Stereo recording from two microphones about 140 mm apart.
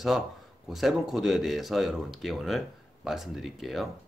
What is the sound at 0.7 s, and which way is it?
Speech, centre (ahead or behind).